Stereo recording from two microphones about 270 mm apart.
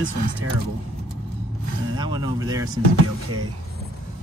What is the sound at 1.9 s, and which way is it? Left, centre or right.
Speech, centre.